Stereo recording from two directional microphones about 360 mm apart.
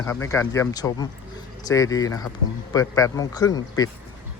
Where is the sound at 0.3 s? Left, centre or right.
Centre.